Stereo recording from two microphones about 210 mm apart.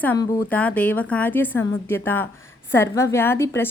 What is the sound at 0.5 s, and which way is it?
A woman's voice, 5° left (ahead or behind).